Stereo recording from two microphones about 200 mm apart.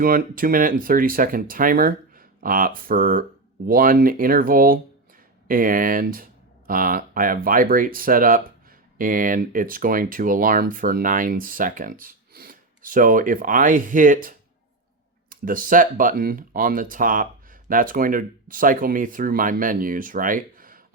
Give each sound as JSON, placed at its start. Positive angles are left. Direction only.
{"t": 0.0, "sound": "speech", "side_deg": -45}